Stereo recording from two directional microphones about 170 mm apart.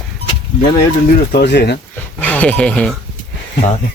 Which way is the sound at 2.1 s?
10° left (ahead or behind).